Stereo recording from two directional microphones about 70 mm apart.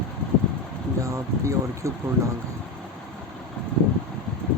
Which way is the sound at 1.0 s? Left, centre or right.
Right.